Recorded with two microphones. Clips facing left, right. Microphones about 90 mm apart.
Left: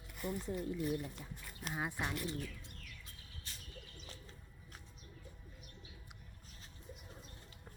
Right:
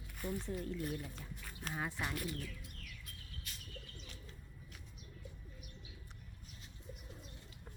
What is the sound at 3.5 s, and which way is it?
Bird, 30° left (ahead or behind).